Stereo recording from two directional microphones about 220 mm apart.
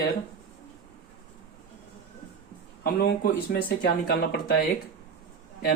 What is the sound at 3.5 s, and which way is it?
Speech, 50° left (ahead or behind).